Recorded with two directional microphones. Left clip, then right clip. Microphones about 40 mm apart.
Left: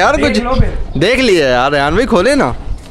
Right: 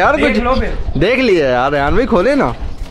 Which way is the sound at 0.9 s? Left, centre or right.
Left.